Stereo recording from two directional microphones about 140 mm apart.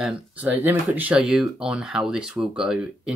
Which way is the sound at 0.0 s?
10° right (ahead or behind).